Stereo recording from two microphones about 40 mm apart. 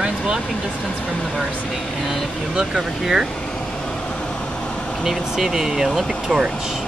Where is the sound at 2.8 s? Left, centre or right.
Centre.